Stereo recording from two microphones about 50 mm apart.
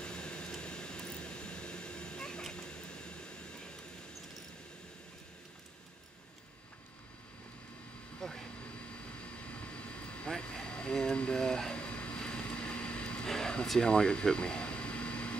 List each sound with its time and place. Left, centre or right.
0.0 s vehicle: centre
8.2 s vehicle: centre
9.2 s vehicle: left
13.3 s a sound: centre